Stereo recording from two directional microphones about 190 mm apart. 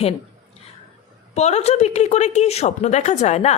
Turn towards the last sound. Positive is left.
turn(degrees=35)  # may be behind; listen again after turning